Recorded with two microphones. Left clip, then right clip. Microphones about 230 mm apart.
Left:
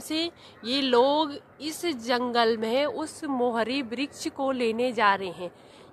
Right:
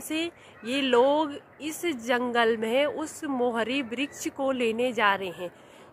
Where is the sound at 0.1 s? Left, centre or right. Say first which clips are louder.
Left 1 dB; left.